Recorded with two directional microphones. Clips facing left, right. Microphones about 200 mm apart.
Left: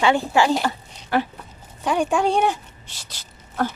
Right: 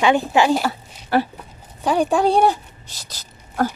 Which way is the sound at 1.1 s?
35° right (ahead or behind).